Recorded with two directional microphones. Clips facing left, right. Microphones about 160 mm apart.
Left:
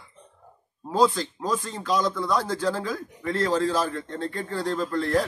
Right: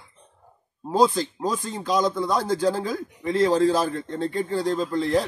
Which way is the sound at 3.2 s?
15° right (ahead or behind).